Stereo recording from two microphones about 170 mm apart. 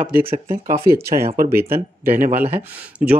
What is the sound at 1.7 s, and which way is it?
Speech, 55° right (ahead or behind).